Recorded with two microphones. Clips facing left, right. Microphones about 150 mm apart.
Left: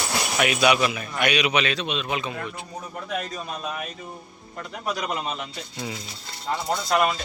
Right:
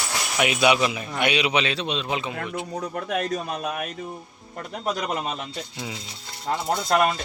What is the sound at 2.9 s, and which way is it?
Speech, 65° right (ahead or behind).